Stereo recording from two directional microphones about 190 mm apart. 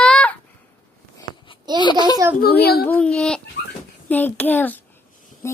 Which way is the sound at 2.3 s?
55° left (ahead or behind).